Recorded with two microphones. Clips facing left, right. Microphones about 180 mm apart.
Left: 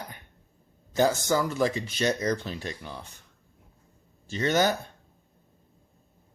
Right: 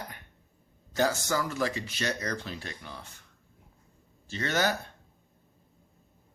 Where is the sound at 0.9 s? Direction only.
20° left (ahead or behind).